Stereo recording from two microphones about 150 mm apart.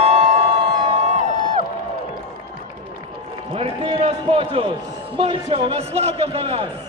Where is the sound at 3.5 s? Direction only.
40° right (ahead or behind).